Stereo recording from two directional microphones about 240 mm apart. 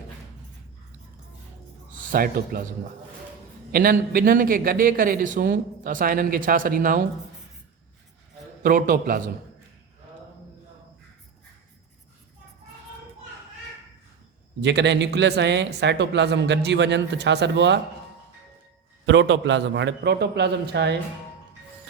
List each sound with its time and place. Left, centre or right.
2.1 s a man's voice: right
3.7 s a man's voice: right
8.6 s a man's voice: right
14.6 s a man's voice: right
19.0 s a man's voice: right